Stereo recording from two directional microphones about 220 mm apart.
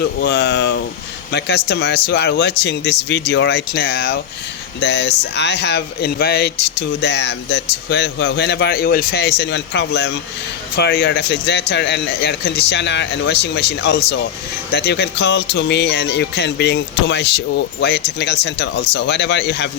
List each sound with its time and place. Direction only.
0.0 s speech: 50° left (ahead or behind)